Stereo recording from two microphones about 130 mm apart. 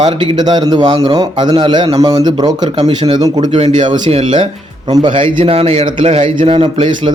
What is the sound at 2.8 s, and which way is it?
A man's voice, 45° right (ahead or behind).